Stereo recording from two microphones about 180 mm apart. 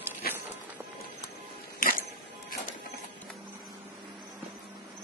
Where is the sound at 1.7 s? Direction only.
50° left (ahead or behind).